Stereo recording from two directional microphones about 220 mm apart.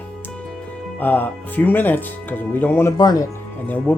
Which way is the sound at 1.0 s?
10° left (ahead or behind).